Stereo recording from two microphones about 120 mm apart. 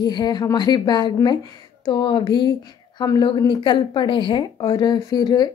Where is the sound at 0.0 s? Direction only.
35° left (ahead or behind).